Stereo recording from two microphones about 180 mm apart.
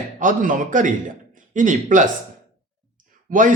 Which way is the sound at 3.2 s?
45° right (ahead or behind).